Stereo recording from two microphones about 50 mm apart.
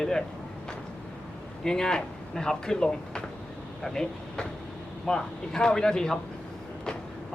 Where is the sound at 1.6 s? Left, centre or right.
Centre.